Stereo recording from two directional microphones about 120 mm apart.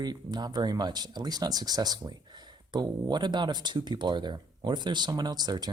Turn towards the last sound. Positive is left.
turn(degrees=-35)  # may be behind; listen again after turning